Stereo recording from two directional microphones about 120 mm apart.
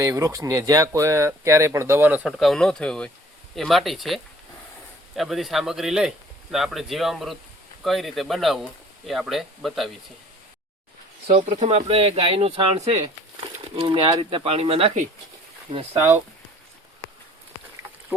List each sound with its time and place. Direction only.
0.0 s speech: 25° right (ahead or behind)
2.2 s a man's voice: centre (ahead or behind)
11.3 s speech: 65° right (ahead or behind)
13.7 s speech: 45° right (ahead or behind)